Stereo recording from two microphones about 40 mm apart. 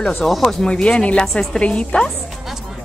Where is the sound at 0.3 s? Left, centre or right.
Centre.